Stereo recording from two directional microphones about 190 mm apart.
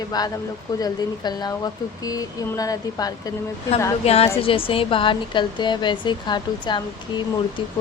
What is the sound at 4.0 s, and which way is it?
Speech, 30° left (ahead or behind).